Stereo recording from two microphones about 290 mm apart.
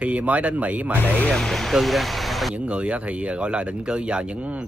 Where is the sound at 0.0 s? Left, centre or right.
Centre.